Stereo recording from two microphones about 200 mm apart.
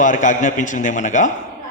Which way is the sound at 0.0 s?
40° left (ahead or behind).